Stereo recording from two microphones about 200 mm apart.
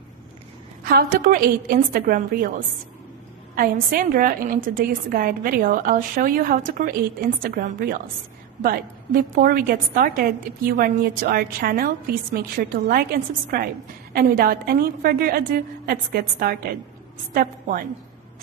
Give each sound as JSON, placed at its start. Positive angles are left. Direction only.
{"t": 0.9, "sound": "a woman's voice", "side_deg": -45}
{"t": 14.1, "sound": "a woman's voice", "side_deg": -50}